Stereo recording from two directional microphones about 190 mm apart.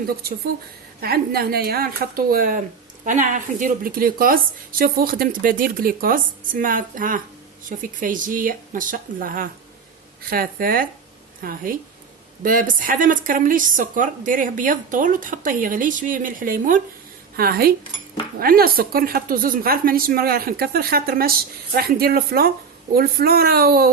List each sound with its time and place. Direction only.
0.2 s a woman's voice: 55° right (ahead or behind)